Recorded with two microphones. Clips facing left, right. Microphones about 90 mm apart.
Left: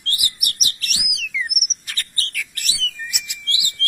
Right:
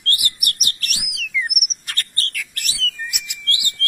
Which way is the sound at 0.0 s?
55° right (ahead or behind).